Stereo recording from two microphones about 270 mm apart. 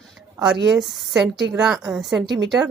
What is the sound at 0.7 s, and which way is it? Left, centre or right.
Speech, centre.